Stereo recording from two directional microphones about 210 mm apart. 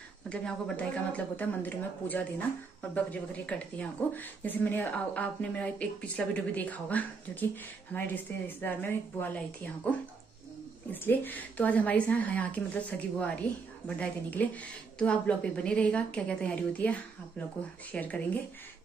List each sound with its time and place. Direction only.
0.3 s speech: 5° left (ahead or behind)